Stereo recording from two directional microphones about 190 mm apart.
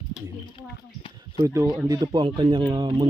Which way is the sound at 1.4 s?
15° right (ahead or behind).